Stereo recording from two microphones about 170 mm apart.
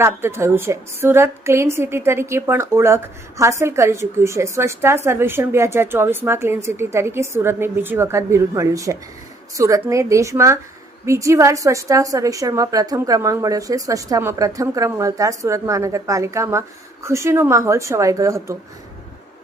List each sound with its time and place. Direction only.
0.0 s a woman's voice: 15° right (ahead or behind)